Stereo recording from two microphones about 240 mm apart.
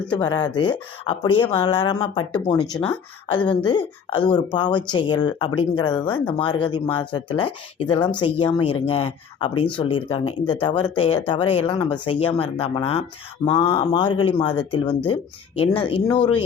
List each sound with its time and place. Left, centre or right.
0.2 s speech: centre